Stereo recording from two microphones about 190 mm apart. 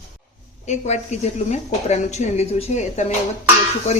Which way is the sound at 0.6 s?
40° left (ahead or behind).